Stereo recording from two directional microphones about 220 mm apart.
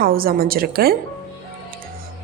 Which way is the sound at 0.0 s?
40° right (ahead or behind).